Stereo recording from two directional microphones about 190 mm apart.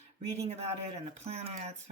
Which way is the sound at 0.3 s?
35° right (ahead or behind).